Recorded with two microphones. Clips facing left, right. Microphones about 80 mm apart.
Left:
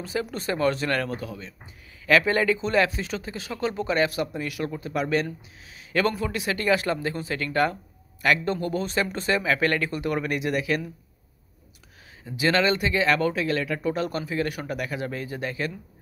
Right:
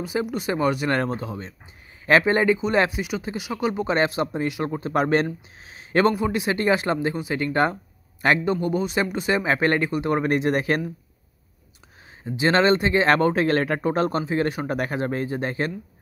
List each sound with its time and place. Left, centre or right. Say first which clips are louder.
0.0 s speech: right 4 dB; centre
0.9 s speech: right 3 dB; right
3.9 s speech: right 1 dB; right
6.1 s speech: right 5 dB; right
8.5 s speech: right 4 dB; centre
9.4 s speech: right 3 dB; right
12.3 s speech: right 4 dB; right